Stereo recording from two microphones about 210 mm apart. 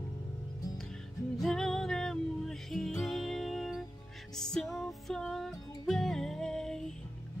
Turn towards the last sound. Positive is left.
turn(degrees=5)  # may be behind; listen again after turning